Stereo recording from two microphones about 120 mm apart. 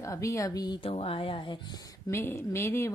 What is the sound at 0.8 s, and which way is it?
Speech, 50° left (ahead or behind).